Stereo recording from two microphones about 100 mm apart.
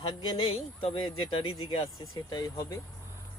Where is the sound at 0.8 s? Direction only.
75° left (ahead or behind).